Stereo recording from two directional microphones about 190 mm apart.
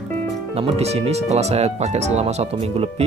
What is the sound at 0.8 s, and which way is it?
Speech, 35° right (ahead or behind).